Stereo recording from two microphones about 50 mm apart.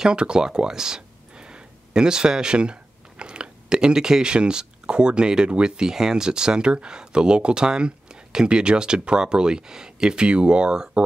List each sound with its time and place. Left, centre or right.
0.0 s speech: centre